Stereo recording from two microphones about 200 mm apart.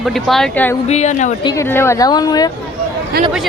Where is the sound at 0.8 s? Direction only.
35° left (ahead or behind).